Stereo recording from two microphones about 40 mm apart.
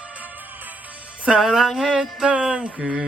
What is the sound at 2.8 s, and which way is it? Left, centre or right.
Music, centre.